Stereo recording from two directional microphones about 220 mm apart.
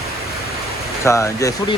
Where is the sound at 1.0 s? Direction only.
15° left (ahead or behind).